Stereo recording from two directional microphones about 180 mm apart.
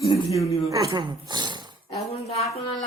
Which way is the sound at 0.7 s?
20° right (ahead or behind).